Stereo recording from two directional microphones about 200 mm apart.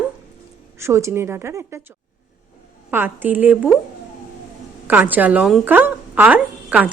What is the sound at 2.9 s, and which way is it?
Speech, 10° right (ahead or behind).